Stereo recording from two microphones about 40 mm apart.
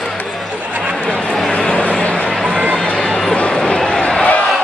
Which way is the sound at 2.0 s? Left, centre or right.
Left.